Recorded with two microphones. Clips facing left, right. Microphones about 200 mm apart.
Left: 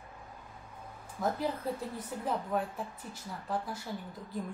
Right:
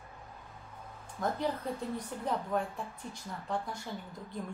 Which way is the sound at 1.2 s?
5° left (ahead or behind).